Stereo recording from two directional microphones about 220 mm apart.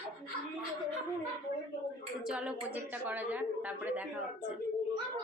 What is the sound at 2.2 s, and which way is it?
A woman's voice, 5° right (ahead or behind).